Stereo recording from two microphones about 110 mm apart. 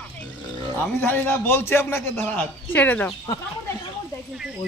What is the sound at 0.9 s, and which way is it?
A man's voice, 15° left (ahead or behind).